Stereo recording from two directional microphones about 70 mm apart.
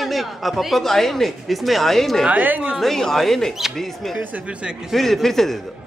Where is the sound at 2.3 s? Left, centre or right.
Right.